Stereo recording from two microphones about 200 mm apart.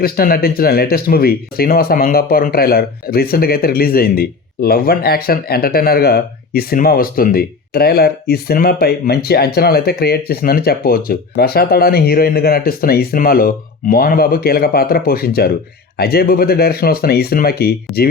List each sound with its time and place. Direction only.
0.0 s speech: 45° left (ahead or behind)